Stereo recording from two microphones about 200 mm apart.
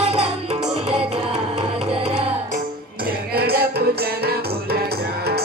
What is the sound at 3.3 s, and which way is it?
Music, 50° right (ahead or behind).